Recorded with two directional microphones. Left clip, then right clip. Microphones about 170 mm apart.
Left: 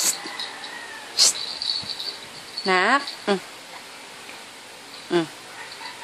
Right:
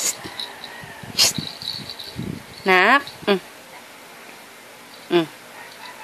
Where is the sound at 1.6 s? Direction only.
30° right (ahead or behind).